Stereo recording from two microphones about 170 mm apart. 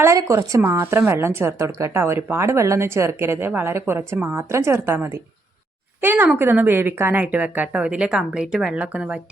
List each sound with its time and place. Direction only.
0.0 s a woman's voice: 20° right (ahead or behind)